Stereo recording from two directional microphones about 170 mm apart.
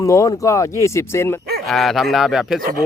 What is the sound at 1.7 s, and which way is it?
Speech, centre (ahead or behind).